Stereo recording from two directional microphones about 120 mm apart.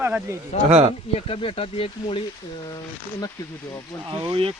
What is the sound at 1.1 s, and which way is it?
Speech, 50° left (ahead or behind).